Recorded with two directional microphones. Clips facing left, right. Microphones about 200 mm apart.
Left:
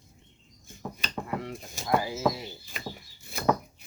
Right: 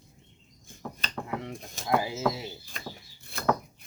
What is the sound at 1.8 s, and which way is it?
Speech, 25° right (ahead or behind).